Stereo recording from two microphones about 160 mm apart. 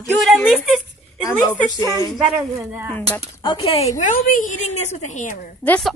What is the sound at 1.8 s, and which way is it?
Speech, 20° left (ahead or behind).